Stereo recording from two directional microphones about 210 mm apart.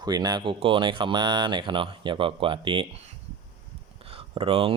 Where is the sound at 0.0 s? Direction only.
20° right (ahead or behind).